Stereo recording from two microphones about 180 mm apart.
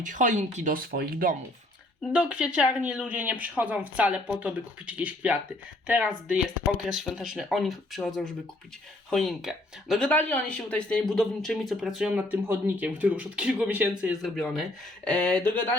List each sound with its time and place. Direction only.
0.0 s speech: 45° right (ahead or behind)
2.1 s speech: 5° right (ahead or behind)